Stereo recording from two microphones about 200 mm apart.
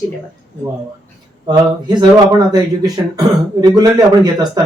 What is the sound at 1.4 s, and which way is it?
Speech, 20° right (ahead or behind).